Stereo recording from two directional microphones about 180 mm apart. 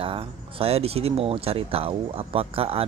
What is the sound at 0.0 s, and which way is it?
Speech, 30° right (ahead or behind).